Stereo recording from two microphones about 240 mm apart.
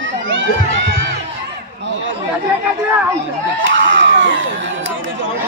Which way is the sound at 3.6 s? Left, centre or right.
Right.